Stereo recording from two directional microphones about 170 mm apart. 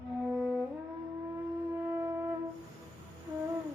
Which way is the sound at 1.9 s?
15° right (ahead or behind).